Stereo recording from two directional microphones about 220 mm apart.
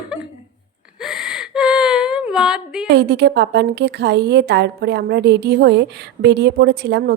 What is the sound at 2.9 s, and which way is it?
A woman's voice, 50° right (ahead or behind).